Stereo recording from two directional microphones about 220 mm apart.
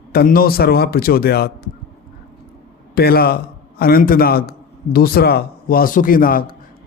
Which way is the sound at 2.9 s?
45° left (ahead or behind).